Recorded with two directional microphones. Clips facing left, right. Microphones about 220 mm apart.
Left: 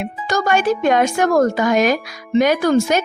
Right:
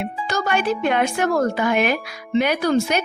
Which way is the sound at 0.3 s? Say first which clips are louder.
Left 5 dB; 45° left (ahead or behind).